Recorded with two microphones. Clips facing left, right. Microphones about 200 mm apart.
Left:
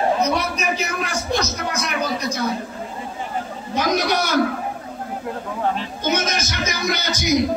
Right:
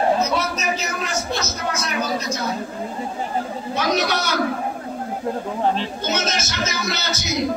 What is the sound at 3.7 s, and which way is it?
Chatter, 15° left (ahead or behind).